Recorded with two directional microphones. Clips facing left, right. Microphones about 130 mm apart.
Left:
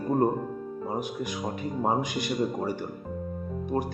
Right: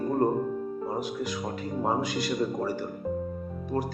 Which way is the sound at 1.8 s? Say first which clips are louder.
Even; 15° left (ahead or behind).